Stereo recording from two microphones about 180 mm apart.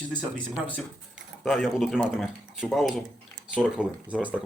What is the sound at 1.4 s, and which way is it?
Speech, centre (ahead or behind).